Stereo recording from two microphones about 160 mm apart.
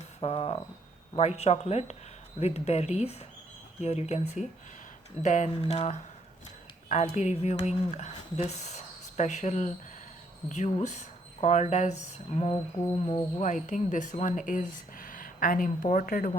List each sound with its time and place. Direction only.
0.2 s speech: 40° left (ahead or behind)
12.7 s music: 15° left (ahead or behind)
13.4 s speech: 50° left (ahead or behind)